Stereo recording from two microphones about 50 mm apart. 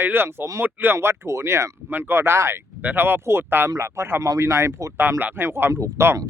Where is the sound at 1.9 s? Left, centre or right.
Right.